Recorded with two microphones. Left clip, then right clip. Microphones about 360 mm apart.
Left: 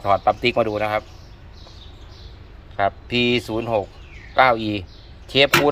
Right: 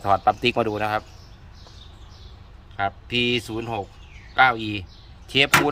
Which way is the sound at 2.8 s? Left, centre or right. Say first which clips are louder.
Left 4 dB; centre.